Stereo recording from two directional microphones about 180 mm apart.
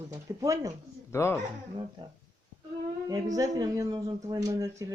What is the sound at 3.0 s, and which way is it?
A man's voice, 20° right (ahead or behind).